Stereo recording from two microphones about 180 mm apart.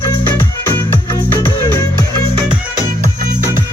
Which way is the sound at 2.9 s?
50° right (ahead or behind).